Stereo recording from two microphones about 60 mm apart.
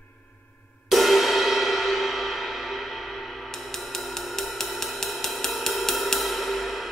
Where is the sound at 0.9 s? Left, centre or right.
Centre.